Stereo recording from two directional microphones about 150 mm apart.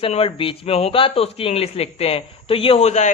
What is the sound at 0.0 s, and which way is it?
Speech, 40° left (ahead or behind).